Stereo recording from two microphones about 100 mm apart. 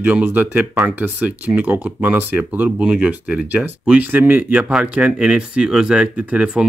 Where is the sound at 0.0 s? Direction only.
15° right (ahead or behind).